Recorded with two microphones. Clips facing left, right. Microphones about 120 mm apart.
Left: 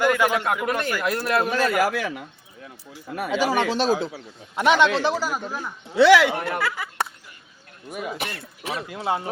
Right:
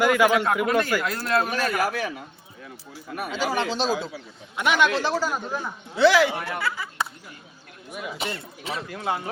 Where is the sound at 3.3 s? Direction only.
65° left (ahead or behind).